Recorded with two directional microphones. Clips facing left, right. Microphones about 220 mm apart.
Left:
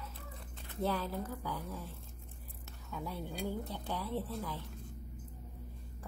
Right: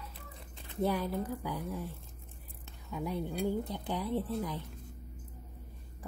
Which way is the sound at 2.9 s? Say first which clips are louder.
Right 6 dB; 15° right (ahead or behind).